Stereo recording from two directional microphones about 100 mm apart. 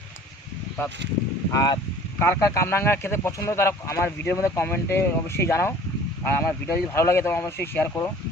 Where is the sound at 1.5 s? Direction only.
40° left (ahead or behind).